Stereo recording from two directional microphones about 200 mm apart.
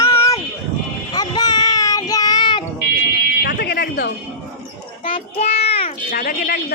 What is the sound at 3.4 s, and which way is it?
Fire alarm, 55° left (ahead or behind).